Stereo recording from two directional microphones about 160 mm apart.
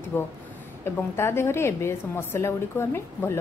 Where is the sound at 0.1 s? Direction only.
15° left (ahead or behind).